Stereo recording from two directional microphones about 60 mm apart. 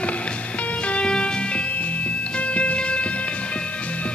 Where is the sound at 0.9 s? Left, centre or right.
Centre.